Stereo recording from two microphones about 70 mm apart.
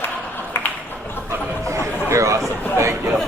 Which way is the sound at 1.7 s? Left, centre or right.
Right.